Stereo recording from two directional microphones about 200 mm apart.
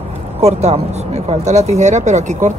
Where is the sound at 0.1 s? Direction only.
30° right (ahead or behind).